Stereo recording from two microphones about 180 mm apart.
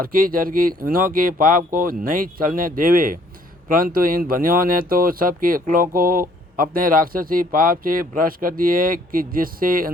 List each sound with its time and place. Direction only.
0.0 s speech: 50° right (ahead or behind)